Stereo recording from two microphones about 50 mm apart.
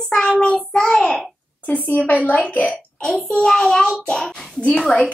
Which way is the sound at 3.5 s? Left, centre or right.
Centre.